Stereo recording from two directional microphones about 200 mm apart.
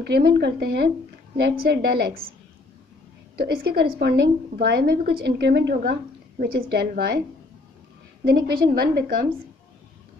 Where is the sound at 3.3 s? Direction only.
50° right (ahead or behind).